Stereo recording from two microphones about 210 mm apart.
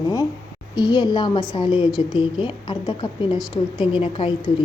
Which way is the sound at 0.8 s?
20° left (ahead or behind).